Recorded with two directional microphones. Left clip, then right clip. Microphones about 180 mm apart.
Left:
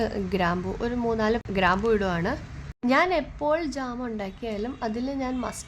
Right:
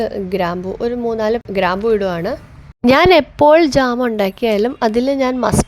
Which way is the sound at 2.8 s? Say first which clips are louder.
Right 13 dB; 55° right (ahead or behind).